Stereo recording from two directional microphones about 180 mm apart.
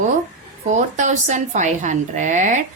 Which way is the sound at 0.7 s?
40° right (ahead or behind).